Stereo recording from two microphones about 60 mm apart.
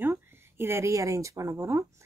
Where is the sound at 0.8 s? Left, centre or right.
Right.